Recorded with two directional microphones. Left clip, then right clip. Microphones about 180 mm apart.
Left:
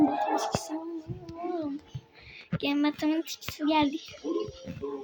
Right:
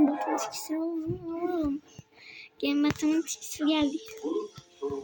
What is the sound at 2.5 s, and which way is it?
A woman's voice, centre (ahead or behind).